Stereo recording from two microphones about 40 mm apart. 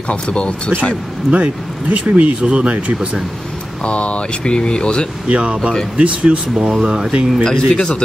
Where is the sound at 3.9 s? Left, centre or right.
Left.